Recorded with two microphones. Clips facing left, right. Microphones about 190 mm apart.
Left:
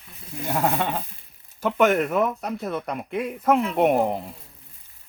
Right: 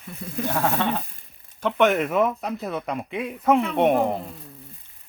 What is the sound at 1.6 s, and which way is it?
Speech, 5° left (ahead or behind).